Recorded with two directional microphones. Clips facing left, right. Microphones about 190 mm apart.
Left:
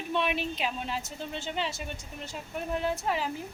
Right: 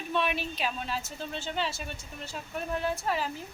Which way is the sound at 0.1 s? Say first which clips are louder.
Left 1 dB; 20° left (ahead or behind).